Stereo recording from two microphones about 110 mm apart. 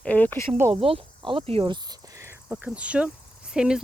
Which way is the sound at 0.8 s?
55° right (ahead or behind).